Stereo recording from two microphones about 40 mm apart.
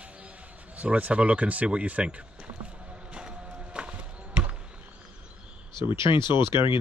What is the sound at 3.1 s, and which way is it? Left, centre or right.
Music, right.